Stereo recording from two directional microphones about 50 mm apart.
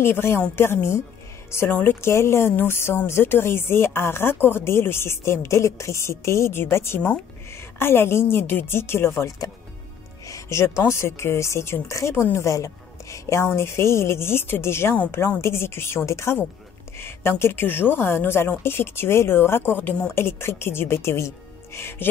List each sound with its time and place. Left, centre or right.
0.0 s speech: left
1.7 s speech: left
2.0 s speech: left
6.5 s speech: left
10.3 s music: left
10.9 s speech: left
16.1 s speech: left
17.0 s a woman's voice: left